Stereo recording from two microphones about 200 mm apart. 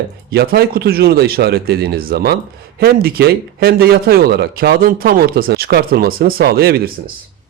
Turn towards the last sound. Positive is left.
turn(degrees=-50)  # may be behind; listen again after turning